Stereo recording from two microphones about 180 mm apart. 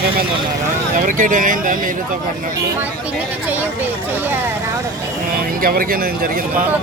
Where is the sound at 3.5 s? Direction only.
10° right (ahead or behind).